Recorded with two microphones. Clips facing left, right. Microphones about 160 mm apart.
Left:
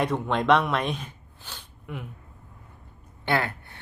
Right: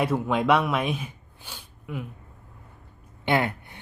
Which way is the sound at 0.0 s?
5° right (ahead or behind).